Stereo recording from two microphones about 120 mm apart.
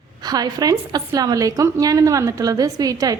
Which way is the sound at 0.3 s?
35° right (ahead or behind).